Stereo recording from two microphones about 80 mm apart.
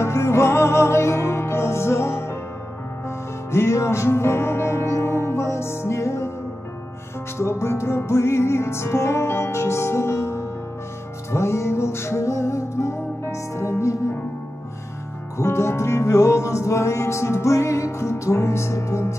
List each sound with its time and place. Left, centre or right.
0.0 s music: left
7.3 s music: left
15.3 s music: left